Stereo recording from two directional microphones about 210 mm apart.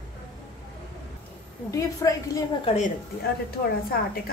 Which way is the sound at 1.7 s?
15° left (ahead or behind).